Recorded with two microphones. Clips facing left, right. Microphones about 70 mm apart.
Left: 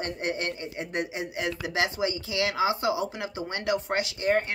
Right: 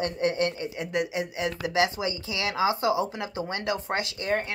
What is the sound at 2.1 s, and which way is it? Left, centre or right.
Speech, right.